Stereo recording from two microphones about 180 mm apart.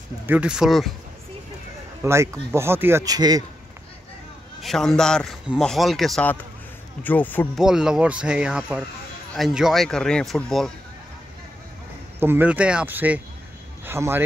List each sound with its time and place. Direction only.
0.3 s a man's voice: 5° right (ahead or behind)
2.0 s speech: 15° right (ahead or behind)
4.6 s a man's voice: centre (ahead or behind)
7.5 s a man's voice: 5° right (ahead or behind)
12.2 s speech: 10° right (ahead or behind)